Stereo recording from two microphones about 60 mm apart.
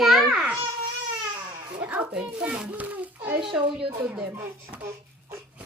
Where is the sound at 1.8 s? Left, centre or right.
Right.